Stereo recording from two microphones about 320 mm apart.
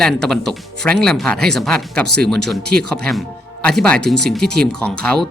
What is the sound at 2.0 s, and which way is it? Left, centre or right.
Speech, right.